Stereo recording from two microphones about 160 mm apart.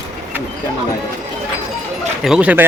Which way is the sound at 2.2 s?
5° right (ahead or behind).